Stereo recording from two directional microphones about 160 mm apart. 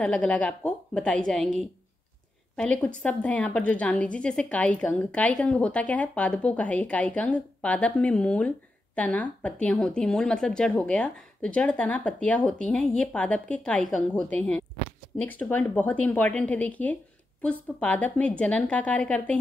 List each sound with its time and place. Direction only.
0.0 s a woman's voice: 5° left (ahead or behind)
3.0 s a woman's voice: 10° left (ahead or behind)